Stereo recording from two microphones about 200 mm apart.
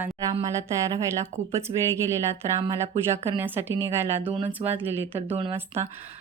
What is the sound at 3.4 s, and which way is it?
A woman's voice, 10° right (ahead or behind).